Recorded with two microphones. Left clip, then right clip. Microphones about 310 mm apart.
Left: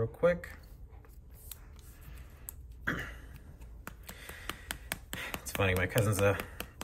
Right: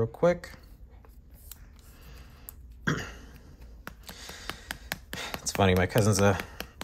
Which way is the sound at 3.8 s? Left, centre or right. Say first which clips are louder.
Right 4 dB; centre.